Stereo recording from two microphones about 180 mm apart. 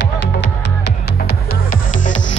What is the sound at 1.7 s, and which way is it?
Music, 45° left (ahead or behind).